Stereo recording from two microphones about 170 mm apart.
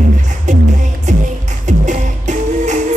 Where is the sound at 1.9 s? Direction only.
45° right (ahead or behind).